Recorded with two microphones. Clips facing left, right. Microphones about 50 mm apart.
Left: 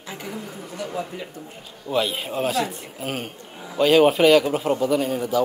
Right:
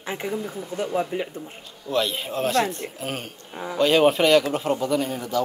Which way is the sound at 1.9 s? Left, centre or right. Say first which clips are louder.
Left 1 dB; centre.